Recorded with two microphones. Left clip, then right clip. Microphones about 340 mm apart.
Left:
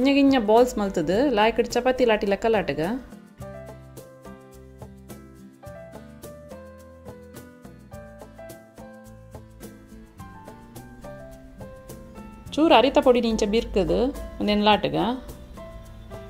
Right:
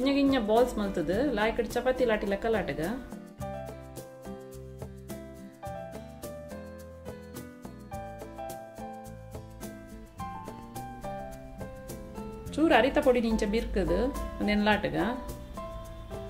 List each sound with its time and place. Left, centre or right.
0.0 s speech: left
12.4 s speech: centre